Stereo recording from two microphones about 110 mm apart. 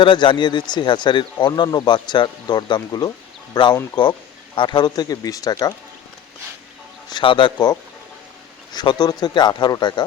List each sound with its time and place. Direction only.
0.0 s speech: 45° left (ahead or behind)
7.1 s speech: 45° left (ahead or behind)